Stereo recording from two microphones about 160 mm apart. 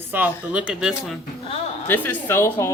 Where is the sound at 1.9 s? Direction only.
15° left (ahead or behind).